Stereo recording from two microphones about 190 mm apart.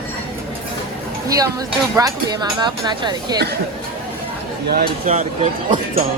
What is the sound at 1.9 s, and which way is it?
Speech, 20° right (ahead or behind).